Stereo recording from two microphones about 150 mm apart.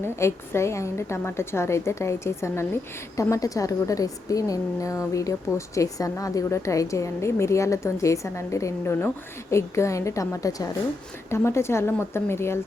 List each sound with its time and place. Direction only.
0.0 s a woman's voice: 15° left (ahead or behind)